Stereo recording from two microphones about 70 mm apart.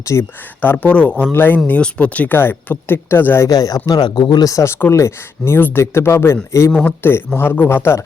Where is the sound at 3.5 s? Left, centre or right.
Left.